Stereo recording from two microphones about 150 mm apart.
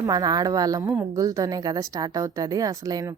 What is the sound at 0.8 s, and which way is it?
Speech, 15° right (ahead or behind).